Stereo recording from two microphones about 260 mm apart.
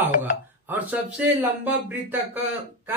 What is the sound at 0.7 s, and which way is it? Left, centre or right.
Speech, centre.